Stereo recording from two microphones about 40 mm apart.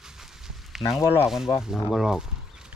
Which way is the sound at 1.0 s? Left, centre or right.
Left.